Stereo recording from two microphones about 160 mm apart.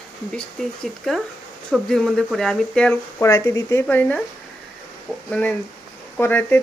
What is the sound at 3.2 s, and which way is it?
Speech, 20° left (ahead or behind).